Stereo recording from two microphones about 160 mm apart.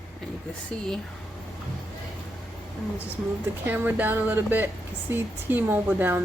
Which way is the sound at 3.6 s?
10° right (ahead or behind).